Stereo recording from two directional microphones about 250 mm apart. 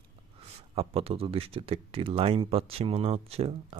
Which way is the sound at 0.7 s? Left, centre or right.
Right.